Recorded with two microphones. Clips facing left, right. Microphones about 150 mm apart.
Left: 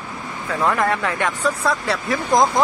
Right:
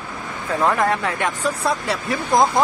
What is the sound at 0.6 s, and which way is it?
Speech, 15° right (ahead or behind).